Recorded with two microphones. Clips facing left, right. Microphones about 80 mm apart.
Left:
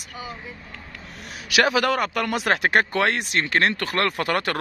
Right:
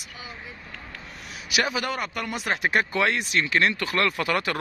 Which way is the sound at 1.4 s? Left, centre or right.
Left.